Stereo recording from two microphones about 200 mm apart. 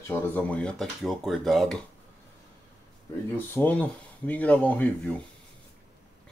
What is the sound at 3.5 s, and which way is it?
Speech, 10° left (ahead or behind).